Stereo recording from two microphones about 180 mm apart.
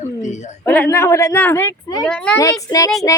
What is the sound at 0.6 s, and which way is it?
A woman's voice, 10° left (ahead or behind).